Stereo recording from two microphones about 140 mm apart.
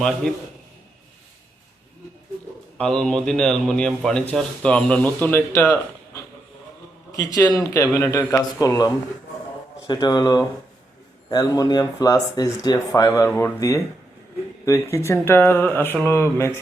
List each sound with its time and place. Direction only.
0.0 s a man's voice: 5° left (ahead or behind)
2.7 s a man's voice: 5° left (ahead or behind); by 5.8 s 20° left (ahead or behind)
7.1 s a man's voice: 25° left (ahead or behind)